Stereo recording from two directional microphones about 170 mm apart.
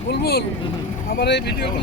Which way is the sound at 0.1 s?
70° left (ahead or behind).